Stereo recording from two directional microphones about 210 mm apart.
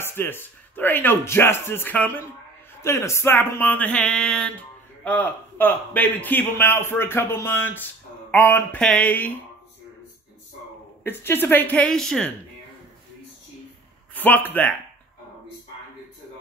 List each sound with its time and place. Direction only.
0.0 s a man's voice: 10° left (ahead or behind)
11.1 s a man's voice: 10° left (ahead or behind)
14.1 s speech: 10° left (ahead or behind)